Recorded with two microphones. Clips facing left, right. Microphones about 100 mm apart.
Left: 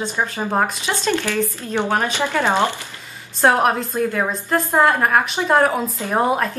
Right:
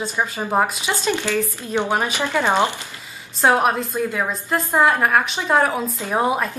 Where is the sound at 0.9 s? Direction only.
15° right (ahead or behind).